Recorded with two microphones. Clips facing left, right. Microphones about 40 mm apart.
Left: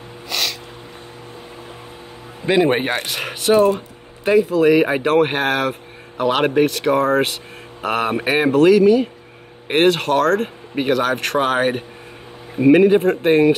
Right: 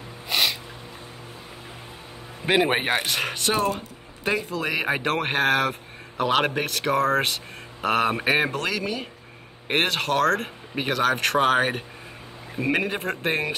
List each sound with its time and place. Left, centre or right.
0.3 s music: centre
2.4 s speech: centre